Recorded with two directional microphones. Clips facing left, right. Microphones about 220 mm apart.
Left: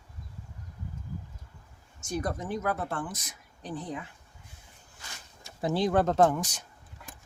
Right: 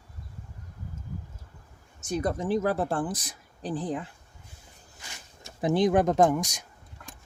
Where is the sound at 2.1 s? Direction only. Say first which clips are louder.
Right 5 dB; 25° right (ahead or behind).